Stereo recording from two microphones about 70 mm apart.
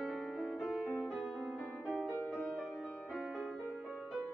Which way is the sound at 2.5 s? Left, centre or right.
Right.